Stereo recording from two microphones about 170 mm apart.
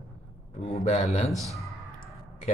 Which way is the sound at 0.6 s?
40° left (ahead or behind).